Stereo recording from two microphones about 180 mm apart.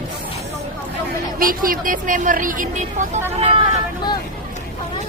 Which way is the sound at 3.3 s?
30° right (ahead or behind).